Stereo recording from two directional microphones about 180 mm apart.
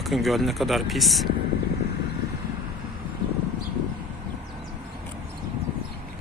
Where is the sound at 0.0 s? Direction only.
Centre (ahead or behind).